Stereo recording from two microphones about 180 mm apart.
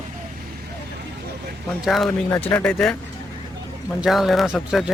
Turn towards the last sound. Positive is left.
turn(degrees=0)  # may be behind; listen again after turning